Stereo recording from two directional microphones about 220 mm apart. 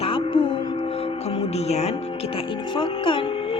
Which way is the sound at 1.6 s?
30° left (ahead or behind).